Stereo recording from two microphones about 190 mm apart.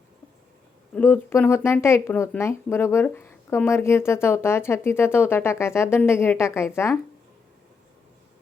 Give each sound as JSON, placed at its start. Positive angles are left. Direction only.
{"t": 0.9, "sound": "speech", "side_deg": 10}